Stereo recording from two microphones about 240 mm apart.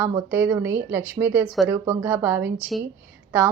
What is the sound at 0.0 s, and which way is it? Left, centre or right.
Speech, centre.